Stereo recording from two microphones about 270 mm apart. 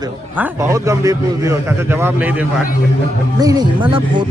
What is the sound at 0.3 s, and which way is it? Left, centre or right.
Speech, centre.